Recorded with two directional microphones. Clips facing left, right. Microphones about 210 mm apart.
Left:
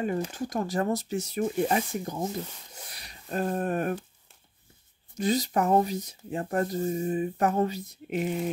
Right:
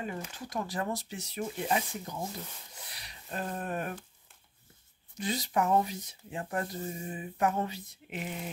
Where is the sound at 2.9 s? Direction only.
45° left (ahead or behind).